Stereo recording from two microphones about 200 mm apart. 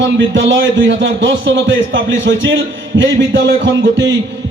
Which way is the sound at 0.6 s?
70° right (ahead or behind).